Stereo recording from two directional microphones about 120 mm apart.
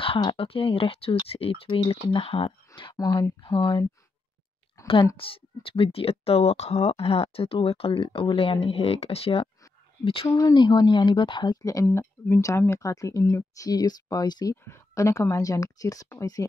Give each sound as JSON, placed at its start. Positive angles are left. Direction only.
{"t": 0.2, "sound": "speech", "side_deg": 45}
{"t": 5.1, "sound": "speech", "side_deg": 50}
{"t": 10.2, "sound": "speech", "side_deg": 25}
{"t": 10.5, "sound": "speech", "side_deg": 40}
{"t": 14.5, "sound": "speech", "side_deg": 25}